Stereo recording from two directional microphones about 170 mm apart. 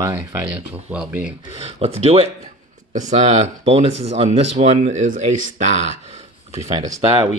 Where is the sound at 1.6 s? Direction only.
40° right (ahead or behind).